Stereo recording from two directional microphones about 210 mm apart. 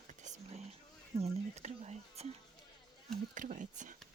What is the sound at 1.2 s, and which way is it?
Speech, 30° right (ahead or behind).